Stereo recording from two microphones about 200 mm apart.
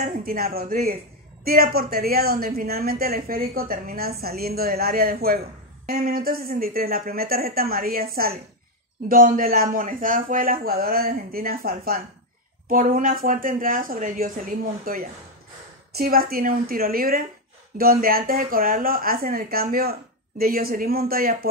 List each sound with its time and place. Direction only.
0.0 s speech: 45° right (ahead or behind)